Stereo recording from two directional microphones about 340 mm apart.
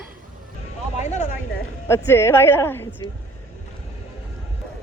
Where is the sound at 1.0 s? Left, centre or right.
Left.